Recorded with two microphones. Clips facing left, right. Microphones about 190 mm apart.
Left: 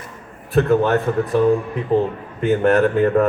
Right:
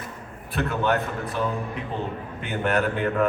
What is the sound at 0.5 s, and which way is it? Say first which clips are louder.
Speech: left 9 dB; 40° left (ahead or behind).